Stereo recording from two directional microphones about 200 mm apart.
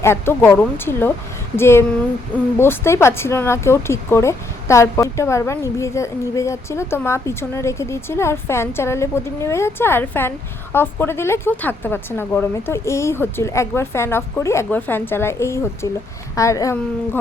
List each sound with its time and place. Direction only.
0.0 s speech: 10° left (ahead or behind)